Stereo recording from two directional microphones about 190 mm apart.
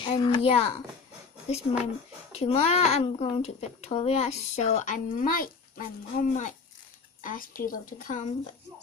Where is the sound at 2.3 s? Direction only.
35° left (ahead or behind).